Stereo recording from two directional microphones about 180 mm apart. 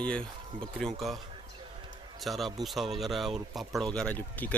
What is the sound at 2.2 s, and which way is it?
Speech, centre (ahead or behind).